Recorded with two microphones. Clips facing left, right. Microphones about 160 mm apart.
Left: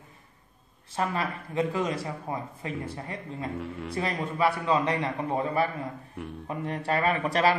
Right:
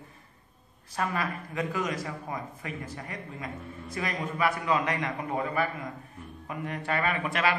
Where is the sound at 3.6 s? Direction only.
80° left.